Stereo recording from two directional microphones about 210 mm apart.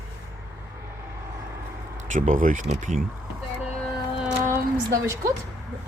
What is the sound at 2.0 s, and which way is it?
Speech, 35° right (ahead or behind).